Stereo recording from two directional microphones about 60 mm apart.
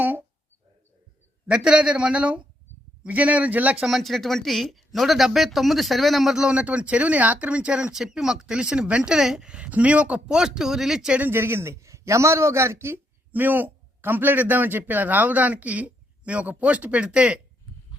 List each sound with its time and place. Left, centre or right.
0.0 s a sound: right
1.5 s a man's voice: centre
3.8 s speech: centre
6.4 s a man's voice: centre
10.3 s speech: centre
11.2 s a man's voice: right
13.3 s a man's voice: right